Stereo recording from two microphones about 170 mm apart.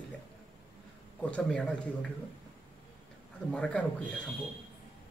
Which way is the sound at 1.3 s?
5° left (ahead or behind).